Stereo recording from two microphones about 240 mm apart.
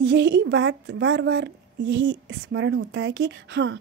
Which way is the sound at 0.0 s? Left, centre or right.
Right.